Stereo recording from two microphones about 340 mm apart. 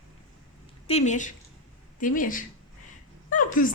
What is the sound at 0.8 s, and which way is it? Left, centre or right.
A woman's voice, centre.